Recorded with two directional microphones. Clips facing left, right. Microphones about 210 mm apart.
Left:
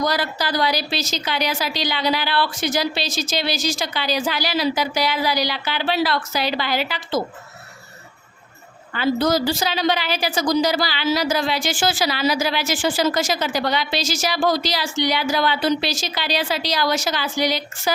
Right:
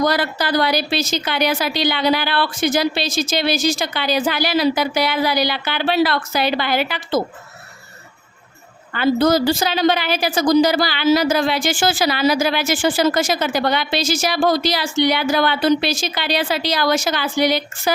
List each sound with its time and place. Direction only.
0.0 s a woman's voice: 55° right (ahead or behind)
8.9 s a woman's voice: 55° right (ahead or behind)